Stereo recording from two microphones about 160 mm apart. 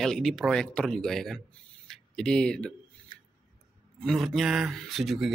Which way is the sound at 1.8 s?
5° left (ahead or behind).